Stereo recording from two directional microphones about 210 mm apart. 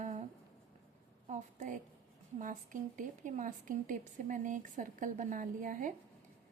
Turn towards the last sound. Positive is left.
turn(degrees=-40)  # may be behind; listen again after turning